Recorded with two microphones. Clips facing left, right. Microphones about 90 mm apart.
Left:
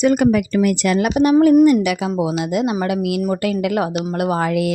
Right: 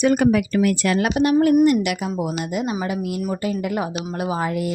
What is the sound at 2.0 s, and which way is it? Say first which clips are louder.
Speech: left 5 dB; 90° left.